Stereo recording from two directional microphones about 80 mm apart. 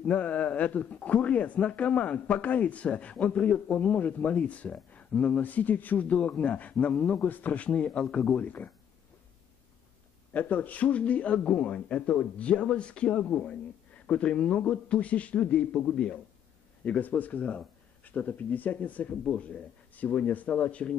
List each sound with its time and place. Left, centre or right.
0.0 s speech: centre
10.3 s speech: left